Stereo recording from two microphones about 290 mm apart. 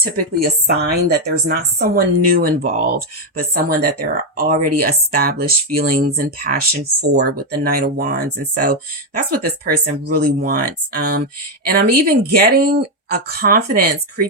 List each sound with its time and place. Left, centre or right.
0.0 s speech: right